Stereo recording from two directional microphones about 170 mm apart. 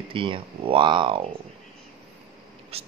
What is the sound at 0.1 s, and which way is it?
Speech, 30° right (ahead or behind).